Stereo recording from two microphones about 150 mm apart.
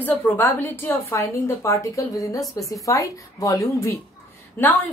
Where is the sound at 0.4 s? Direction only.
15° left (ahead or behind).